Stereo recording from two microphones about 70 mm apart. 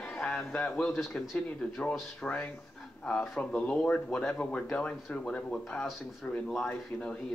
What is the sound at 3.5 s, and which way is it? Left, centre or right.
Speech, centre.